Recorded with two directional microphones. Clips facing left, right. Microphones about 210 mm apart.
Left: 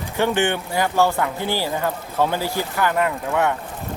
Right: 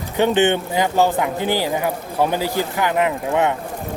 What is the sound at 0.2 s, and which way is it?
Speech, 20° right (ahead or behind).